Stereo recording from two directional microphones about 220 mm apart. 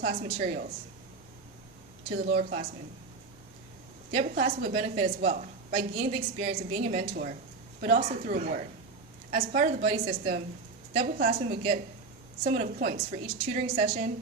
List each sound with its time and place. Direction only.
0.0 s a woman's voice: 30° right (ahead or behind)
2.3 s a woman's voice: 35° right (ahead or behind)
4.1 s a woman's voice: 30° right (ahead or behind)